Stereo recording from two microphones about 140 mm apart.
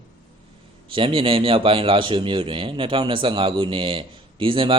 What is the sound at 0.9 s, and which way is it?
A man's voice, 40° right (ahead or behind).